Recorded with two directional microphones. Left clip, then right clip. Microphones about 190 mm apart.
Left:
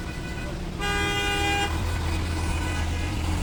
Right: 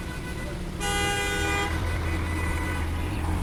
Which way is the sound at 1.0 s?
50° left (ahead or behind).